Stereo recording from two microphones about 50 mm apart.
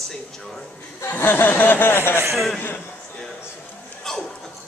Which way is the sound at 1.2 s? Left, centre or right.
Left.